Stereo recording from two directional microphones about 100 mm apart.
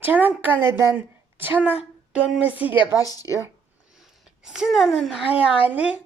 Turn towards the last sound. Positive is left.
turn(degrees=-15)  # may be behind; listen again after turning